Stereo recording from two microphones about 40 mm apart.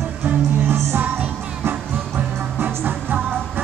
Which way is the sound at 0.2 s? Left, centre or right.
Right.